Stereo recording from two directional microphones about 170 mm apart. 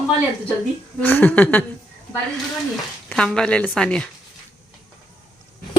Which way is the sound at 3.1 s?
5° left (ahead or behind).